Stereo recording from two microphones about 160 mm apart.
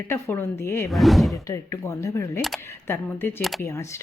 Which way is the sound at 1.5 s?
15° left (ahead or behind).